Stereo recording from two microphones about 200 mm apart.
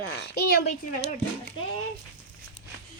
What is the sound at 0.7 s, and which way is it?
Speech, 35° left (ahead or behind).